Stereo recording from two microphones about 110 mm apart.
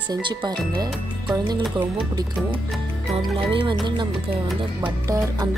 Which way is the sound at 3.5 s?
50° right (ahead or behind).